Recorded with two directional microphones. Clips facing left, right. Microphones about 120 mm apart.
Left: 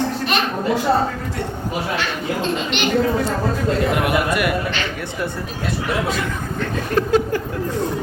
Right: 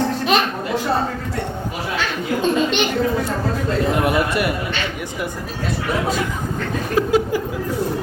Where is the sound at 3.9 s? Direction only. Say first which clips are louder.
Even; 30° right (ahead or behind).